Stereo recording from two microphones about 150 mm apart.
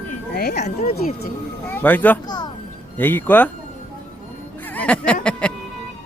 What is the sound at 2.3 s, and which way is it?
Music, 25° left (ahead or behind).